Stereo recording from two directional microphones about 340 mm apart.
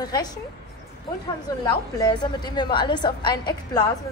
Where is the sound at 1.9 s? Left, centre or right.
Centre.